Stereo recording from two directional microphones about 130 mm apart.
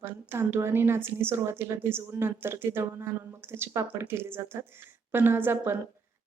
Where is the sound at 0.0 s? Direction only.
20° right (ahead or behind).